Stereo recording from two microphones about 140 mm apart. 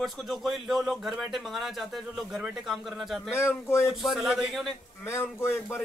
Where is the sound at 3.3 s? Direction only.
20° left (ahead or behind).